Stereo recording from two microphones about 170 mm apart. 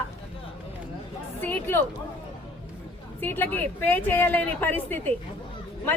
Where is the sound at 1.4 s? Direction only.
10° left (ahead or behind).